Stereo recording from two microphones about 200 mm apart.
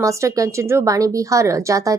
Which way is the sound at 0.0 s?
15° right (ahead or behind).